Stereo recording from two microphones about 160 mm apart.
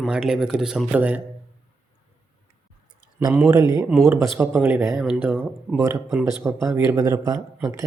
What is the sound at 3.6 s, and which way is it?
Speech, 25° left (ahead or behind).